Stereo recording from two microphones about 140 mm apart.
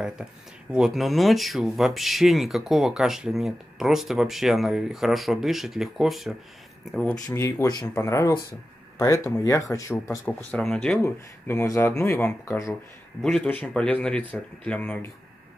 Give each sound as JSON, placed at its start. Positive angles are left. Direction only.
{"t": 0.0, "sound": "speech", "side_deg": -5}
{"t": 7.2, "sound": "speech", "side_deg": 20}
{"t": 10.2, "sound": "speech", "side_deg": 5}
{"t": 11.0, "sound": "speech", "side_deg": 20}
{"t": 12.4, "sound": "speech", "side_deg": 25}
{"t": 13.2, "sound": "speech", "side_deg": 5}